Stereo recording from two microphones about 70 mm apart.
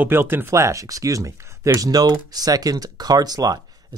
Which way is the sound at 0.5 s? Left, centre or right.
Right.